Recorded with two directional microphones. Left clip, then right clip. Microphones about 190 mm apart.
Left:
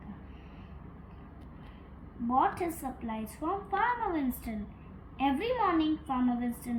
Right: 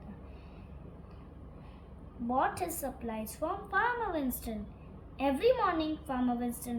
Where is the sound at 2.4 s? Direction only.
20° right (ahead or behind).